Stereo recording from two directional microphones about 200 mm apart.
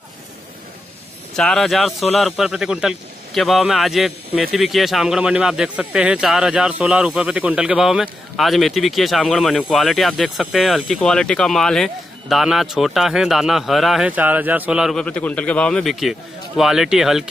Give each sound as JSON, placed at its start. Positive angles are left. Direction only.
{"t": 1.3, "sound": "speech", "side_deg": 5}